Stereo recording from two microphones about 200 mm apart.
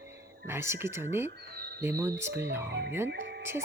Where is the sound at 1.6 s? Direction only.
50° right (ahead or behind).